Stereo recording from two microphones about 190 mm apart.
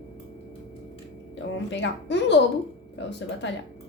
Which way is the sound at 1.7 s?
70° left (ahead or behind).